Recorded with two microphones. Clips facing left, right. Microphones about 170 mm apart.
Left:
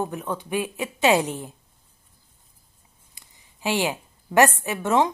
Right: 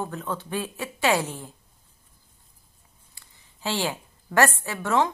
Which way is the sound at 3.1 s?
15° left (ahead or behind).